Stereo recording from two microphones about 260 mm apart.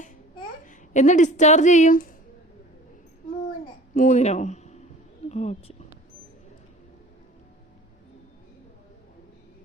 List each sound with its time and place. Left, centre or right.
0.6 s speech: left
3.9 s speech: left